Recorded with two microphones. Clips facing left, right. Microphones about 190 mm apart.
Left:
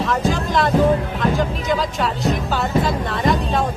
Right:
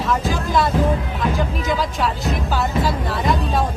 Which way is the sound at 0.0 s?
Centre (ahead or behind).